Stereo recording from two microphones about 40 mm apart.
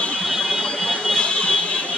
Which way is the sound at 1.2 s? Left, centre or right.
Left.